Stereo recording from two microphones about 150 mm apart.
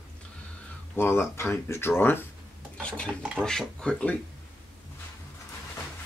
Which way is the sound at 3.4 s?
5° left (ahead or behind).